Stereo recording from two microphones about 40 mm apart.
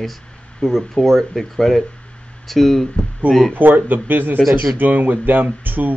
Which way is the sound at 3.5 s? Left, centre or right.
Right.